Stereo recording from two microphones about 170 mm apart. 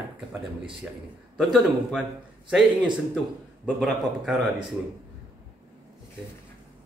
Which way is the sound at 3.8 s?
Centre (ahead or behind).